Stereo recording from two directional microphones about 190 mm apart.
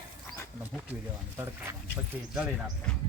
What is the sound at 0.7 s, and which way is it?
Speech, 10° right (ahead or behind).